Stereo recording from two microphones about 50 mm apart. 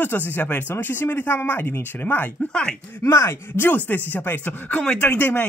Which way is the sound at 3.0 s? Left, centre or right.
Left.